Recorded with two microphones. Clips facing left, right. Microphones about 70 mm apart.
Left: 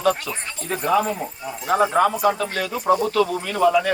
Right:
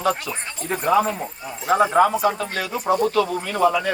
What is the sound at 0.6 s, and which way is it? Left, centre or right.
Speech, right.